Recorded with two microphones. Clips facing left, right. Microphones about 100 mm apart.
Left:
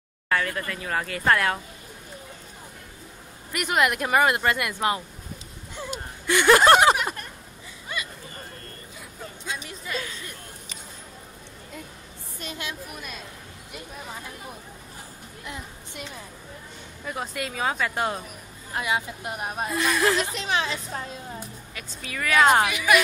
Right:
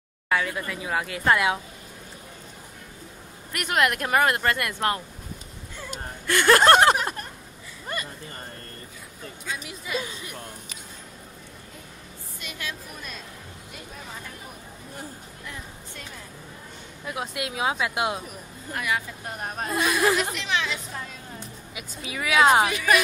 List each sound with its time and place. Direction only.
0.3 s a woman's voice: 10° right (ahead or behind)
3.5 s speech: 5° left (ahead or behind)
5.8 s a sound: 10° left (ahead or behind)
9.6 s a woman's voice: 10° right (ahead or behind)
15.4 s music: 20° left (ahead or behind)
17.0 s a woman's voice: 5° right (ahead or behind)
18.8 s speech: 20° left (ahead or behind)
19.7 s a woman's voice: 5° right (ahead or behind)
20.3 s a woman's voice: 35° left (ahead or behind)
21.7 s a woman's voice: 10° right (ahead or behind)
22.7 s speech: 35° right (ahead or behind)